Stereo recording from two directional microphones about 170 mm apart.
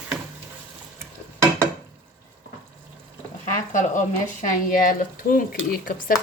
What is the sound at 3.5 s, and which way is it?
Speech, 50° left (ahead or behind).